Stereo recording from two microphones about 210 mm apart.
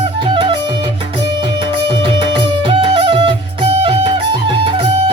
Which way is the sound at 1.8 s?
25° right (ahead or behind).